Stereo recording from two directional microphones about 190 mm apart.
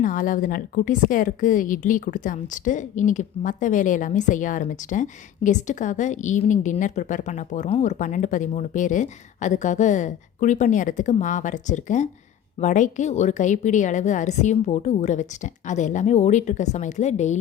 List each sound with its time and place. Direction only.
0.0 s a woman's voice: 45° left (ahead or behind)